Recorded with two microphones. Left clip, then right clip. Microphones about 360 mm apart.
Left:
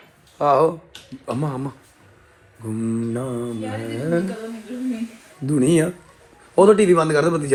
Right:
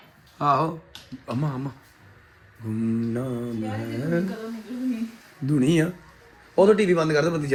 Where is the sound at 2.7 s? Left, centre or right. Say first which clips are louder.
Left 2 dB; left.